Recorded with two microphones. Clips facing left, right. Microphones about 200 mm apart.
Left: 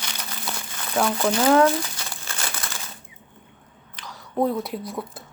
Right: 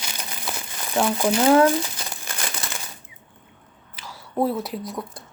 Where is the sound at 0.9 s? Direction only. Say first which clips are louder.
Right 1 dB; 15° right (ahead or behind).